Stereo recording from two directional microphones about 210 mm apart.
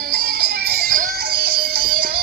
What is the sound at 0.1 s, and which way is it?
Music, 50° right (ahead or behind).